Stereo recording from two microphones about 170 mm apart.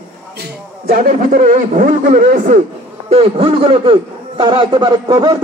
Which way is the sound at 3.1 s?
35° right (ahead or behind).